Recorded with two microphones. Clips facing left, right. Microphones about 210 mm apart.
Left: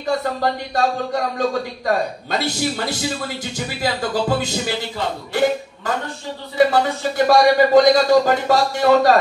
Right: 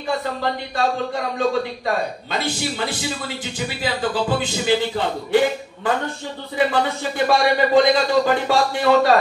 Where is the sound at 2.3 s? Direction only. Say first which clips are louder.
Left 3 dB; 40° left (ahead or behind).